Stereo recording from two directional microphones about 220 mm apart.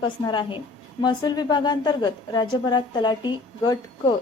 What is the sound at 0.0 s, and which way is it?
A woman's voice, 20° left (ahead or behind).